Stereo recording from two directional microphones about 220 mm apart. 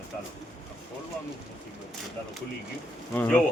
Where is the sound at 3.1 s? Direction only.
5° left (ahead or behind).